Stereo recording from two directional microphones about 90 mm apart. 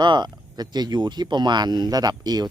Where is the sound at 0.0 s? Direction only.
55° right (ahead or behind).